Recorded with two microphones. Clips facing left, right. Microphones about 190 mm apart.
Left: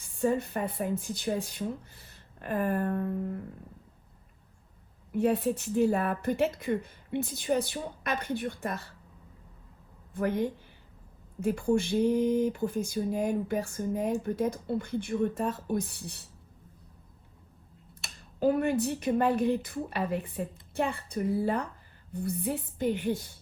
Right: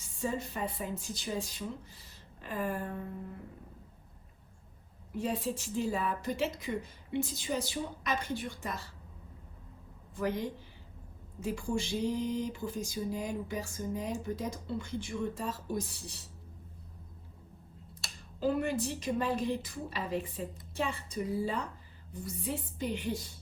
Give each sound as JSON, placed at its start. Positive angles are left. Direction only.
{"t": 0.0, "sound": "speech", "side_deg": 55}
{"t": 5.1, "sound": "speech", "side_deg": 60}
{"t": 10.2, "sound": "speech", "side_deg": 55}
{"t": 18.0, "sound": "a sound", "side_deg": 20}
{"t": 18.3, "sound": "speech", "side_deg": 60}